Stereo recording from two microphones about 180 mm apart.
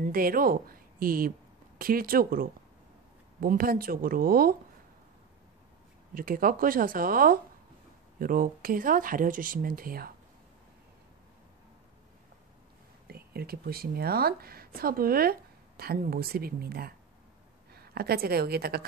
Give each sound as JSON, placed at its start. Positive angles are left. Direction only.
{"t": 0.0, "sound": "a woman's voice", "side_deg": -55}
{"t": 6.1, "sound": "speech", "side_deg": -50}
{"t": 13.0, "sound": "speech", "side_deg": -60}